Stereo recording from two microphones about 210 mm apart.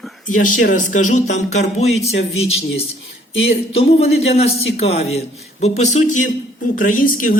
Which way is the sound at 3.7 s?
30° left (ahead or behind).